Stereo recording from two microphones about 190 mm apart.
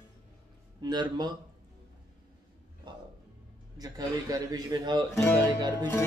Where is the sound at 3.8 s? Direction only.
20° right (ahead or behind).